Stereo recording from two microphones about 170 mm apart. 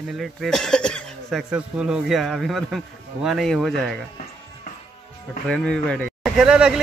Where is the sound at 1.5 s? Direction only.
5° right (ahead or behind).